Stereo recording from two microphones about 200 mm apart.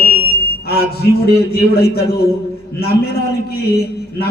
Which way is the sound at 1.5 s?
50° left (ahead or behind).